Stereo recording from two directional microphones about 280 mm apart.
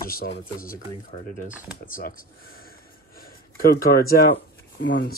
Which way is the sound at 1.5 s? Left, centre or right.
Centre.